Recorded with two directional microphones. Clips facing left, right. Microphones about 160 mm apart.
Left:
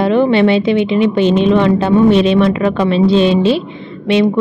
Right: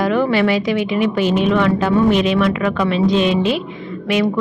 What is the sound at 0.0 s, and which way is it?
A woman's voice, 25° left (ahead or behind).